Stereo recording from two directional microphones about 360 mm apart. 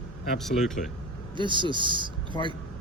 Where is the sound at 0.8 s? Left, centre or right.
Left.